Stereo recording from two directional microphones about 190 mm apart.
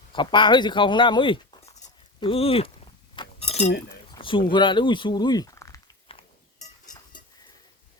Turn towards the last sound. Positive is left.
turn(degrees=30)  # may be behind; listen again after turning